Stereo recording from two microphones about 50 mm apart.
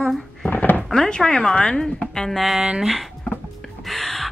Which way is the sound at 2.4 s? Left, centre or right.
Centre.